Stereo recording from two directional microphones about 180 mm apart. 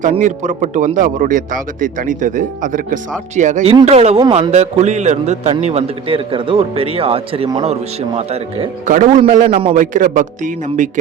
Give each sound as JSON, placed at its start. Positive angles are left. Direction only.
{"t": 0.2, "sound": "a man's voice", "side_deg": -45}
{"t": 8.9, "sound": "a man's voice", "side_deg": -45}